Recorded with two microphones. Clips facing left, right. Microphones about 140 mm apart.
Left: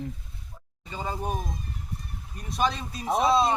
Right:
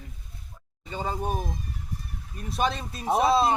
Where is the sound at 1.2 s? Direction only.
5° right (ahead or behind).